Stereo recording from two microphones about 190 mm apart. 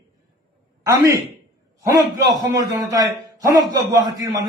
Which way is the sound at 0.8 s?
15° right (ahead or behind).